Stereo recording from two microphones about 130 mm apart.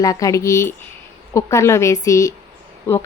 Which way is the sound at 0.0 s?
25° left (ahead or behind).